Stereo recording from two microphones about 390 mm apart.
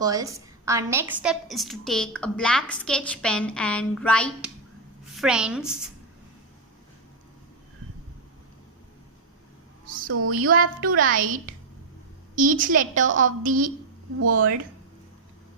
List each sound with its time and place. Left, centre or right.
0.0 s a woman's voice: centre
9.8 s a sound: right
10.2 s speech: right
10.5 s a woman's voice: right
14.2 s speech: right